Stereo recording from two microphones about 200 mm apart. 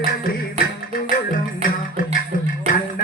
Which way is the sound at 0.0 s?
45° left (ahead or behind).